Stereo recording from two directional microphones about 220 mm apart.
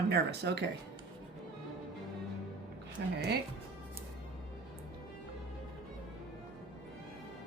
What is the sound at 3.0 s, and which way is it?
Speech, 50° right (ahead or behind).